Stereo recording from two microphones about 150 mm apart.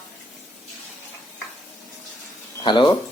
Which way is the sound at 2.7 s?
30° left (ahead or behind).